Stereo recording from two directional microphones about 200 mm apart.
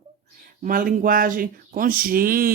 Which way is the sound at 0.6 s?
45° right (ahead or behind).